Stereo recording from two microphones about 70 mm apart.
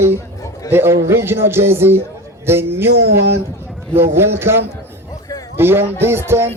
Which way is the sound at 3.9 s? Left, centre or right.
Right.